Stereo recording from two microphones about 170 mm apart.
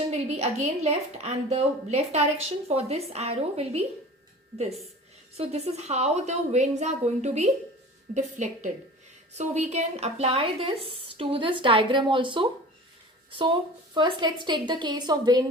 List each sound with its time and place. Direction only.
0.1 s a woman's voice: 40° right (ahead or behind)
5.4 s a woman's voice: 40° right (ahead or behind); by 15.4 s 25° right (ahead or behind)